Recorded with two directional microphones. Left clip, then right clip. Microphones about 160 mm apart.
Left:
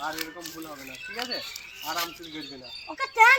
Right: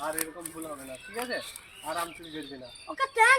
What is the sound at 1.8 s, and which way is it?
A man's voice, 20° right (ahead or behind).